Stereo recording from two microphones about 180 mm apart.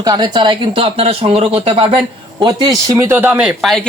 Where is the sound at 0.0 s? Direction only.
20° right (ahead or behind).